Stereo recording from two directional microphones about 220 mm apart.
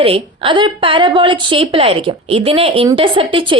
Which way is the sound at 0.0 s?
25° right (ahead or behind).